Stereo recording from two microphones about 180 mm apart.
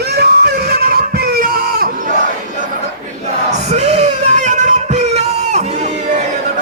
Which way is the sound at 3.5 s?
40° right (ahead or behind).